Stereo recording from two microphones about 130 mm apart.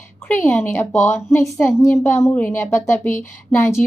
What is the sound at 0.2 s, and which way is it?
A woman's voice, 15° left (ahead or behind).